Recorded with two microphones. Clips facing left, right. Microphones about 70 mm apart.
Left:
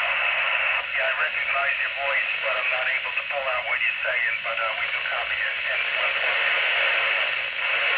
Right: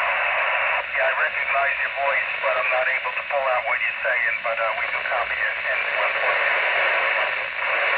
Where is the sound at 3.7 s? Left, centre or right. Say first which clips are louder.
Right 3 dB; right.